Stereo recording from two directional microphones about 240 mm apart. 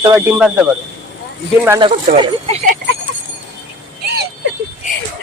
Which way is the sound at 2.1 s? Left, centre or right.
Right.